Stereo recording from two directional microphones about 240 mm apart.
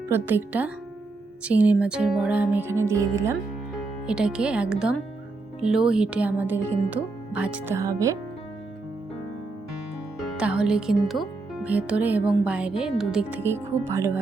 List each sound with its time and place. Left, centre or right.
0.1 s speech: centre
10.3 s speech: centre